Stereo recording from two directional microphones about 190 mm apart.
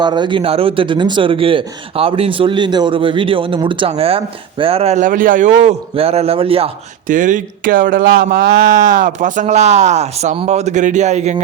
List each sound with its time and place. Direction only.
0.0 s speech: 25° right (ahead or behind)
7.1 s speech: 45° right (ahead or behind)